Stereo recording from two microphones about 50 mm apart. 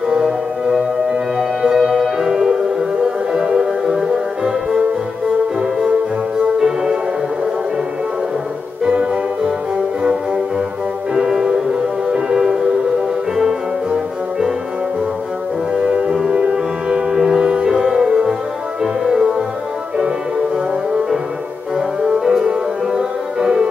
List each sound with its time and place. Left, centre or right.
0.1 s music: centre
6.6 s music: centre
8.9 s music: right
11.1 s music: centre
15.8 s music: right
21.7 s music: centre